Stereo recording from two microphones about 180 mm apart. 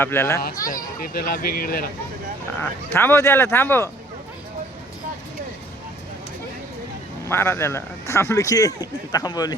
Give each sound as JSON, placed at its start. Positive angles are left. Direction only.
{"t": 0.0, "sound": "speech", "side_deg": 15}
{"t": 0.7, "sound": "speech", "side_deg": 55}
{"t": 2.6, "sound": "speech", "side_deg": 10}
{"t": 7.3, "sound": "speech", "side_deg": 10}